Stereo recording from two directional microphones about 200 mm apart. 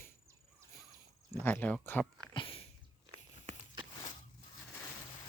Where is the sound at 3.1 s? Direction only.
25° right (ahead or behind).